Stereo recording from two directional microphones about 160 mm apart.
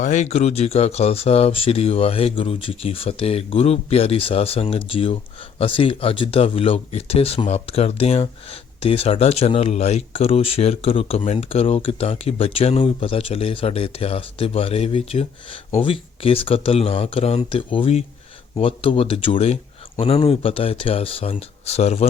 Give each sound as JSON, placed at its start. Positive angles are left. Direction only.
{"t": 0.0, "sound": "speech", "side_deg": 45}